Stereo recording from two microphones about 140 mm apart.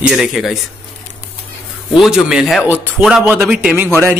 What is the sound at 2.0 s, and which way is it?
A man's voice, 5° right (ahead or behind).